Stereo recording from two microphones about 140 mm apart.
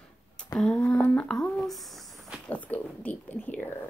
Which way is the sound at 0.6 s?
5° left (ahead or behind).